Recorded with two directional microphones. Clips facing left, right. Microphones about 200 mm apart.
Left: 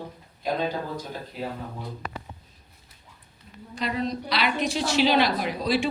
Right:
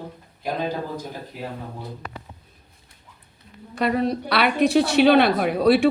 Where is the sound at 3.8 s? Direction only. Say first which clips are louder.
Right 6 dB; 60° right (ahead or behind).